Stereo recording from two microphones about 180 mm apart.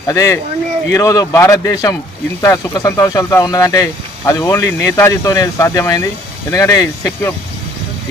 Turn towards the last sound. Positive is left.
turn(degrees=20)  # may be behind; listen again after turning